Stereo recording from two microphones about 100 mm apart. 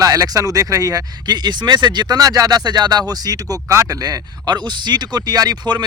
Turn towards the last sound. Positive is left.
turn(degrees=-45)  # may be behind; listen again after turning